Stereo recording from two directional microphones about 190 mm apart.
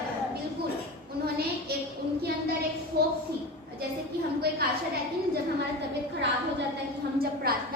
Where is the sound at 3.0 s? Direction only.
55° right (ahead or behind).